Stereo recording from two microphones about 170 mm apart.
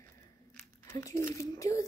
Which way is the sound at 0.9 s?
20° left (ahead or behind).